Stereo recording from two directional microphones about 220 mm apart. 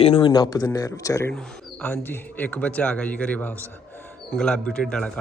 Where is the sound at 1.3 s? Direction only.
5° left (ahead or behind).